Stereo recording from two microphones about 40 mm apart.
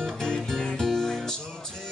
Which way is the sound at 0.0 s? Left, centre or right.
Centre.